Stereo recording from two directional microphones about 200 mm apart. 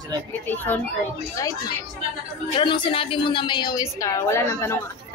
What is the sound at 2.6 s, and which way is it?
A woman's voice, 25° left (ahead or behind).